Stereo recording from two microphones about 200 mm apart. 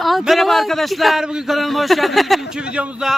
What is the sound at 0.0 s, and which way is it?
A man's voice, centre (ahead or behind).